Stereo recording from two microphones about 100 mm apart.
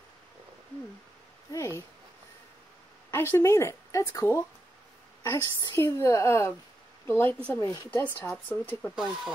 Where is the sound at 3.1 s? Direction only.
25° left (ahead or behind).